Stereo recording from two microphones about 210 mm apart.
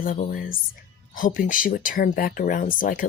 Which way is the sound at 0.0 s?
40° left (ahead or behind).